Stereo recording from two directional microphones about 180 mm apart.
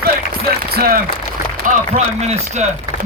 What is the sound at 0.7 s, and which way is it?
Speech, 55° right (ahead or behind).